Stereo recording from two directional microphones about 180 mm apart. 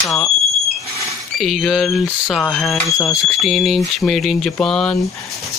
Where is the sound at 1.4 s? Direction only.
Centre (ahead or behind).